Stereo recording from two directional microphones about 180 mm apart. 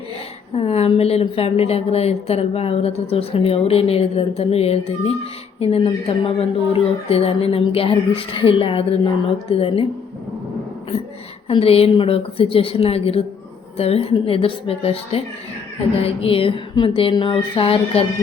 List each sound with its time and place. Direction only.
0.5 s a woman's voice: 35° left (ahead or behind)
11.4 s a woman's voice: 35° left (ahead or behind)
16.0 s a sound: 30° left (ahead or behind)